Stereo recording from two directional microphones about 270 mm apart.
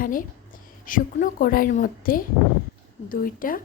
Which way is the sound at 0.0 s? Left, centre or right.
Left.